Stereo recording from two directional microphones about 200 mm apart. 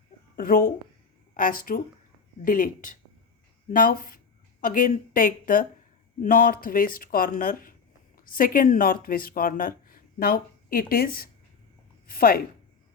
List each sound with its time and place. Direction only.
0.3 s speech: 45° left (ahead or behind)